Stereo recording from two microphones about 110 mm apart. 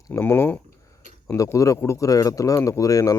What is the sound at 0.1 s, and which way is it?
Speech, 20° left (ahead or behind).